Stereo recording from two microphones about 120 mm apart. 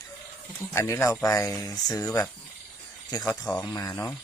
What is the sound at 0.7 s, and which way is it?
Speech, 25° left (ahead or behind).